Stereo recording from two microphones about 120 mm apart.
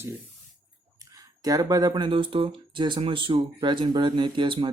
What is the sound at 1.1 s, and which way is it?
Speech, 30° right (ahead or behind).